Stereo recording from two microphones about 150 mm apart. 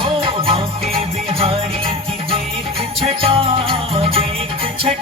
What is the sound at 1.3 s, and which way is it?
Jingle bell, 35° right (ahead or behind).